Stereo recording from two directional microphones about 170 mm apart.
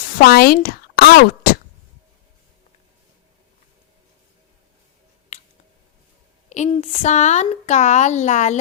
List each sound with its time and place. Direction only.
0.2 s speech: 60° left (ahead or behind)
1.5 s a sound: 60° left (ahead or behind)
6.7 s speech: 40° left (ahead or behind)